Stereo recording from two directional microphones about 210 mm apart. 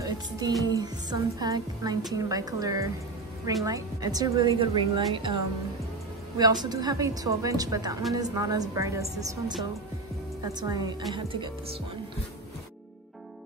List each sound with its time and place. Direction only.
0.0 s music: 20° right (ahead or behind)
0.7 s a woman's voice: 20° right (ahead or behind)
10.4 s a woman's voice: 20° right (ahead or behind)